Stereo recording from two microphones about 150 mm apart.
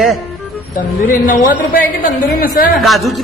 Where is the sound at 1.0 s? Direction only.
65° left (ahead or behind).